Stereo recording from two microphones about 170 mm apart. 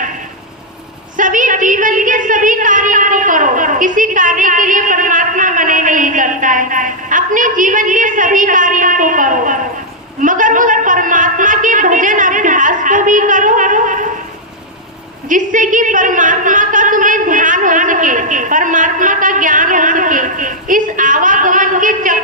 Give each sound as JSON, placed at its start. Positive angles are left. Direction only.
{"t": 1.1, "sound": "a woman's voice", "side_deg": -50}
{"t": 10.2, "sound": "a sound", "side_deg": -50}
{"t": 15.3, "sound": "a woman's voice", "side_deg": -50}